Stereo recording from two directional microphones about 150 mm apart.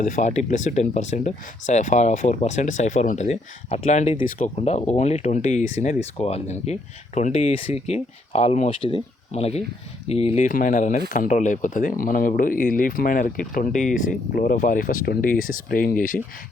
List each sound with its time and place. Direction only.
0.0 s speech: 60° left (ahead or behind)
4.5 s speech: 50° left (ahead or behind)
10.4 s speech: 60° left (ahead or behind)